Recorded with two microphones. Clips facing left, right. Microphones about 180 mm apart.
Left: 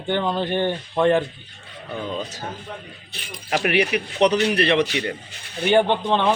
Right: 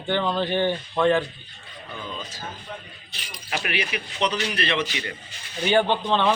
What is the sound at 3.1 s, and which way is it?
Speech, 50° left (ahead or behind).